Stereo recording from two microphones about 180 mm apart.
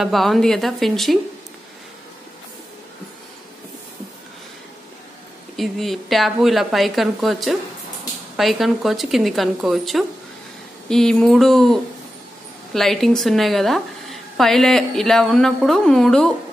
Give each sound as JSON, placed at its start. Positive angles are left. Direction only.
{"t": 0.0, "sound": "a woman's voice", "side_deg": 0}
{"t": 5.6, "sound": "a woman's voice", "side_deg": 0}